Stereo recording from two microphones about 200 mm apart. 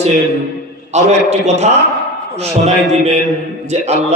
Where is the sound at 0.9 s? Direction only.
35° right (ahead or behind).